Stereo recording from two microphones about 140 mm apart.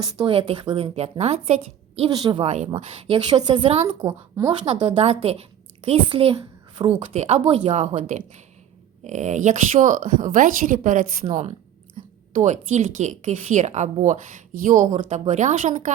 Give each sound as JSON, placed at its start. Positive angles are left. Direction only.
{"t": 0.2, "sound": "a woman's voice", "side_deg": -40}
{"t": 2.0, "sound": "speech", "side_deg": -30}
{"t": 2.4, "sound": "a woman's voice", "side_deg": -50}
{"t": 2.6, "sound": "a woman's voice", "side_deg": -30}
{"t": 12.0, "sound": "a sound", "side_deg": -60}
{"t": 12.3, "sound": "speech", "side_deg": -60}